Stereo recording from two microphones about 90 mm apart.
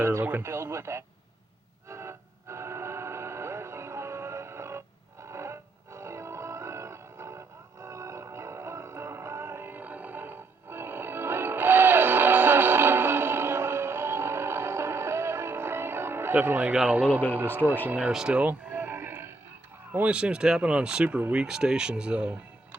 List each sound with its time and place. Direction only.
0.0 s a sound: 30° right (ahead or behind)
1.9 s music: 30° right (ahead or behind)
16.7 s speech: 15° right (ahead or behind)
18.1 s music: 10° right (ahead or behind); by 19.3 s 25° right (ahead or behind)
19.9 s speech: 15° right (ahead or behind)